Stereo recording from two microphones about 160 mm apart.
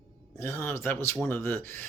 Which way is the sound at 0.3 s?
15° left (ahead or behind).